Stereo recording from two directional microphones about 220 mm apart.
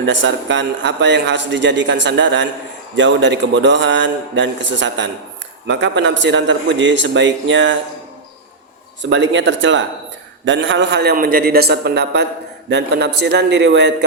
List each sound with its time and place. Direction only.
0.0 s a man's voice: 55° right (ahead or behind)
9.0 s a man's voice: 55° right (ahead or behind)